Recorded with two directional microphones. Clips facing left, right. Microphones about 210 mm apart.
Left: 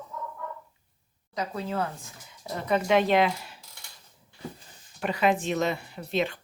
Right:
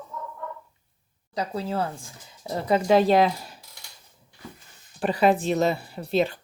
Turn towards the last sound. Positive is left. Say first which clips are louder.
# right 4 dB
turn(degrees=-35)  # may be behind; listen again after turning